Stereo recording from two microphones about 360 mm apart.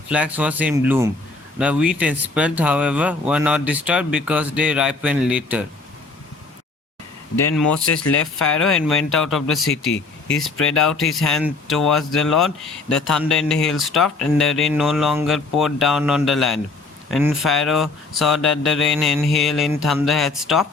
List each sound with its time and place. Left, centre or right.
0.1 s speech: centre
8.0 s speech: left
8.6 s speech: centre
9.7 s speech: left
10.7 s speech: centre